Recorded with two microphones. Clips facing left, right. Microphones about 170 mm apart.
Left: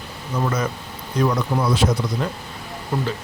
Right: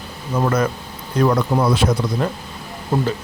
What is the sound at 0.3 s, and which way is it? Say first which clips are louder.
Speech: right 4 dB; 55° right (ahead or behind).